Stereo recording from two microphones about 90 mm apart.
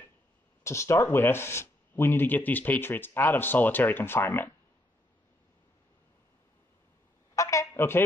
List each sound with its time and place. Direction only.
0.7 s speech: 30° left (ahead or behind)
7.3 s a sound: 35° left (ahead or behind)
7.7 s speech: 25° left (ahead or behind)